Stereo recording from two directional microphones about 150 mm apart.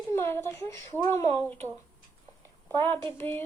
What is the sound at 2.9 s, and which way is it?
Speech, 15° left (ahead or behind).